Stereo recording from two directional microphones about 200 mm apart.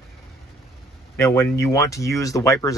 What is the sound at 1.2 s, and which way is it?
Speech, 15° left (ahead or behind).